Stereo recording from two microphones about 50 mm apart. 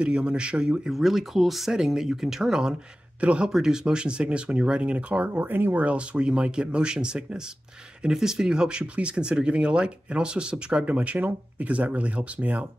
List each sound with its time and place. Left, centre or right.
0.0 s speech: right
0.9 s speech: centre
3.2 s speech: right
3.4 s speech: centre; by 5.4 s right
5.4 s speech: right
5.8 s speech: right
10.9 s speech: right